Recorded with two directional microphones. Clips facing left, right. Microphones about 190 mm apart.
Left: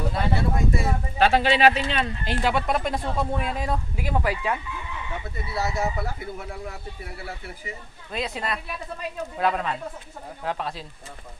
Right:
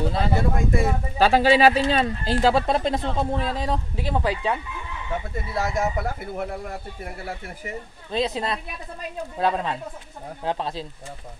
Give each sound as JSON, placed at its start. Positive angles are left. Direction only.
{"t": 0.4, "sound": "speech", "side_deg": -50}
{"t": 1.1, "sound": "speech", "side_deg": -35}
{"t": 5.5, "sound": "speech", "side_deg": -50}
{"t": 8.1, "sound": "speech", "side_deg": -25}